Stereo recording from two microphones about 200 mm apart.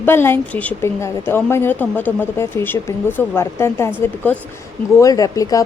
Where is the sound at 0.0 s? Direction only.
10° left (ahead or behind).